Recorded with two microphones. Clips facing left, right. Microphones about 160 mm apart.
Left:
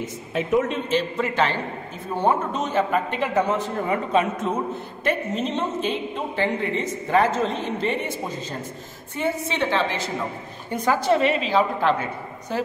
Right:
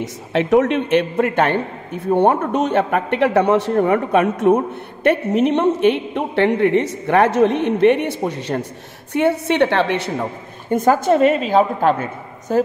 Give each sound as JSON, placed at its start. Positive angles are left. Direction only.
{"t": 0.0, "sound": "a woman's voice", "side_deg": -85}
{"t": 10.7, "sound": "a woman's voice", "side_deg": -50}